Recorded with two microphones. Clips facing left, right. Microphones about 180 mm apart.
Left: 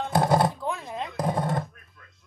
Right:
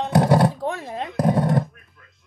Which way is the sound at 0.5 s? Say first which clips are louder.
Right 4 dB; 35° right (ahead or behind).